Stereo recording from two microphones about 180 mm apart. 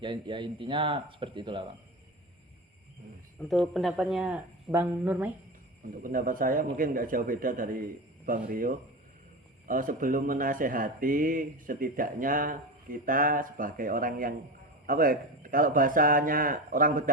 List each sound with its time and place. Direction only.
0.0 s speech: 25° right (ahead or behind)
3.7 s speech: centre (ahead or behind)
6.0 s speech: 50° right (ahead or behind)